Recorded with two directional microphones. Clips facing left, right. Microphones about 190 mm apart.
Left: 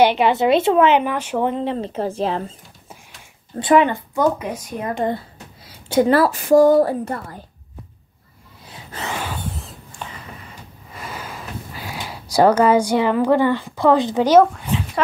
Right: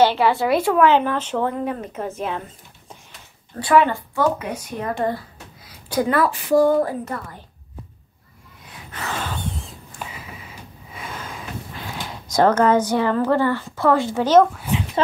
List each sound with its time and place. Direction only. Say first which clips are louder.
0.0 s speech: left 2 dB; 20° left (ahead or behind)
1.5 s speech: left 3 dB; 25° left (ahead or behind)
3.5 s a woman's voice: left 2 dB; 20° left (ahead or behind)
9.0 s a sound: left 1 dB; 10° left (ahead or behind)
9.9 s sniff: even; 5° right (ahead or behind); by 14.5 s 10° left (ahead or behind)